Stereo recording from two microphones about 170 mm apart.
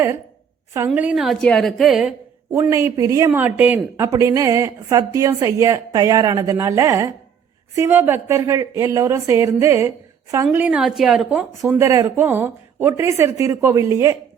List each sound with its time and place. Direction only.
0.9 s a woman's voice: 5° right (ahead or behind)
2.5 s speech: 15° right (ahead or behind)